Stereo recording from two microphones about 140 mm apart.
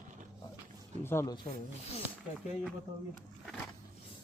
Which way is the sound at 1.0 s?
20° left (ahead or behind).